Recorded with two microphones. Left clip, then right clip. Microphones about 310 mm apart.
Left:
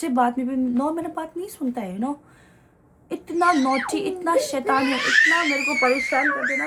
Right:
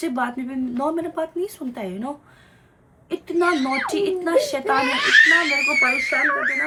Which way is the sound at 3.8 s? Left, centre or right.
Centre.